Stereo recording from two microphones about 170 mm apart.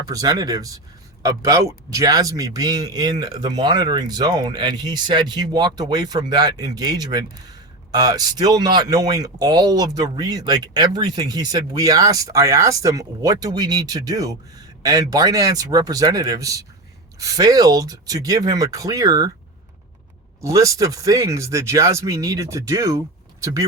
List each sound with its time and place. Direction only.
0.0 s speech: 20° right (ahead or behind)
20.4 s speech: 20° right (ahead or behind)